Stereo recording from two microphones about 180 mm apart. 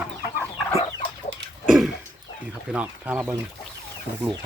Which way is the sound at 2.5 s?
5° right (ahead or behind).